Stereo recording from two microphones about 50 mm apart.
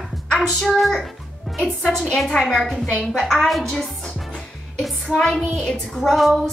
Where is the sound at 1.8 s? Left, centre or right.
Centre.